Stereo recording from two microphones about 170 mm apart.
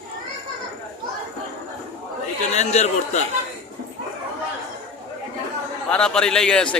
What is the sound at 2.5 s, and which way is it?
Speech, 40° left (ahead or behind).